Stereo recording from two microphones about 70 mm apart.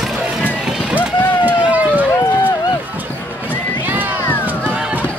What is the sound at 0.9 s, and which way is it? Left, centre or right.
Run, right.